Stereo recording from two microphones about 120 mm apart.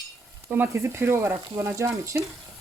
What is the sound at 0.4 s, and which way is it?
Speech, 20° right (ahead or behind).